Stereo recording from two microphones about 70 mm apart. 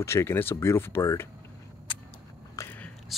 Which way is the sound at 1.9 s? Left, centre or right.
Left.